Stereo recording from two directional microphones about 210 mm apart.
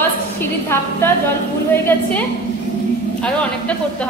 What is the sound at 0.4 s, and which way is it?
Speech, 10° left (ahead or behind).